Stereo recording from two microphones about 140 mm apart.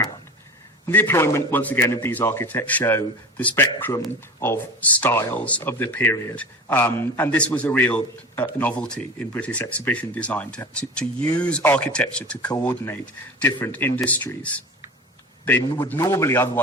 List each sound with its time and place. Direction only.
0.9 s a man's voice: 15° left (ahead or behind)